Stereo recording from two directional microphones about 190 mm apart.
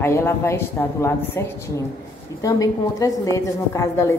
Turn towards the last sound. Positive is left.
turn(degrees=15)  # may be behind; listen again after turning